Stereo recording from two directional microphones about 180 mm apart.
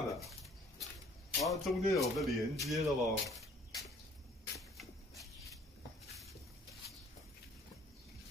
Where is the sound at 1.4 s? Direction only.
Centre (ahead or behind).